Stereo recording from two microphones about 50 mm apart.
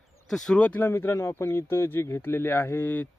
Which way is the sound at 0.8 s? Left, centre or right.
Left.